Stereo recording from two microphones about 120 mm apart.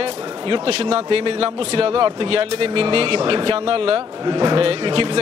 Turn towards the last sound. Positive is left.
turn(degrees=-45)  # may be behind; listen again after turning